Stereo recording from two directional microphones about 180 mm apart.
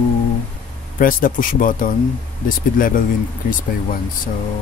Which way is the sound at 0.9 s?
50° left (ahead or behind).